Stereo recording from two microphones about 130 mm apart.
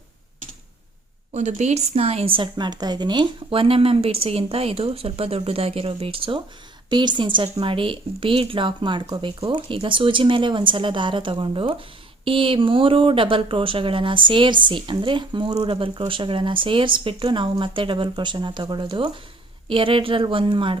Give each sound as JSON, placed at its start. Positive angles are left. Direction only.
{"t": 1.3, "sound": "speech", "side_deg": -65}